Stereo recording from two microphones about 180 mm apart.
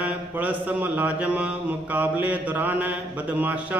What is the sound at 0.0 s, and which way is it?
Mantra, 10° right (ahead or behind).